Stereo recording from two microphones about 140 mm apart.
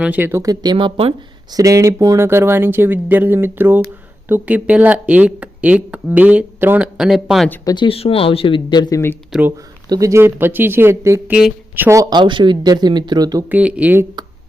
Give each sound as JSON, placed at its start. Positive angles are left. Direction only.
{"t": 0.0, "sound": "speech", "side_deg": -15}
{"t": 1.5, "sound": "speech", "side_deg": -25}
{"t": 7.6, "sound": "speech", "side_deg": 25}
{"t": 7.9, "sound": "speech", "side_deg": 45}
{"t": 9.3, "sound": "speech", "side_deg": -5}
{"t": 9.9, "sound": "speech", "side_deg": -25}
{"t": 12.1, "sound": "speech", "side_deg": -35}
{"t": 13.5, "sound": "speech", "side_deg": -10}